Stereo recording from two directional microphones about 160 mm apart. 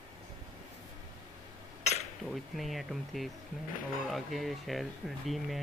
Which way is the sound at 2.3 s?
Centre (ahead or behind).